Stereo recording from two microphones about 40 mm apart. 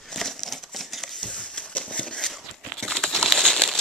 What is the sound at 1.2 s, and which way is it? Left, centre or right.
Horse, left.